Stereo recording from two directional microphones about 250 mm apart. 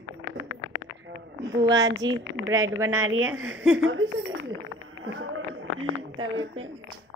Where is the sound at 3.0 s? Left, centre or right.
Right.